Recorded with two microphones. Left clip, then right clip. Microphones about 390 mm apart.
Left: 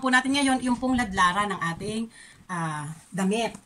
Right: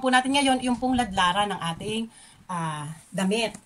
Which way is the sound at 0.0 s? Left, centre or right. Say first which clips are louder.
Right 1 dB; centre.